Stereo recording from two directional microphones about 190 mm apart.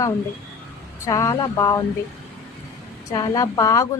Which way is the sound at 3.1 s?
20° left (ahead or behind).